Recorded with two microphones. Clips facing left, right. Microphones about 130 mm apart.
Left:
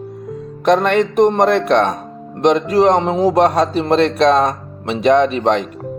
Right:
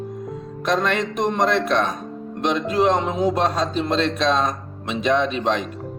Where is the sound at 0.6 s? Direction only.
60° left (ahead or behind).